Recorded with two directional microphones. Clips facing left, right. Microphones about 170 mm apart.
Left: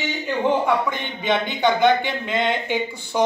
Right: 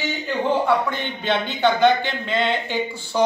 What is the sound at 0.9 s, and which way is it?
Speech, 15° left (ahead or behind).